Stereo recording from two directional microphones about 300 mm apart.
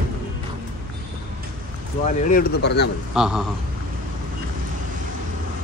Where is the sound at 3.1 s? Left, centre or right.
Centre.